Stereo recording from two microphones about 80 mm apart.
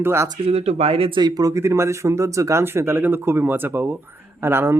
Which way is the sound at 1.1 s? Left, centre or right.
Right.